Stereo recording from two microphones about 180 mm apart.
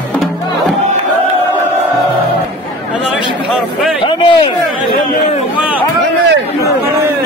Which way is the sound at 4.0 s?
25° left (ahead or behind).